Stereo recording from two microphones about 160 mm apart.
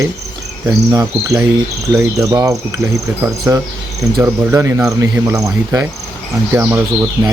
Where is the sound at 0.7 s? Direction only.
20° right (ahead or behind).